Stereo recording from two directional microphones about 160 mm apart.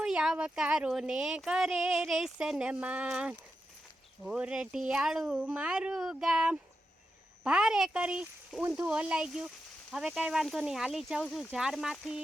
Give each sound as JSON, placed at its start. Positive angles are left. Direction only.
{"t": 0.0, "sound": "speech", "side_deg": -5}